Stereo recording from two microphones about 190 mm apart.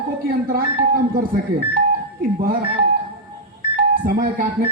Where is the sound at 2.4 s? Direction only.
50° right (ahead or behind).